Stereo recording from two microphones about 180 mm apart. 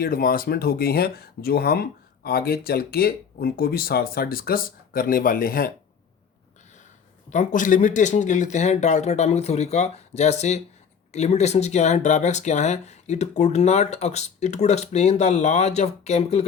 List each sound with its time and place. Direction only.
0.0 s speech: 55° left (ahead or behind)
7.3 s speech: 45° left (ahead or behind)